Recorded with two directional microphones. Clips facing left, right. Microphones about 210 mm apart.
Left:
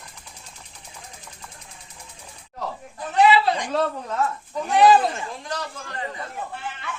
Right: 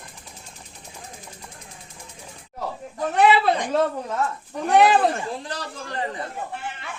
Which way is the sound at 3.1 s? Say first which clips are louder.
Even; 55° right (ahead or behind).